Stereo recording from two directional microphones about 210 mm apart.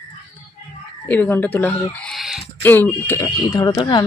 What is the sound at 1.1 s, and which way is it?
Speech, 10° left (ahead or behind).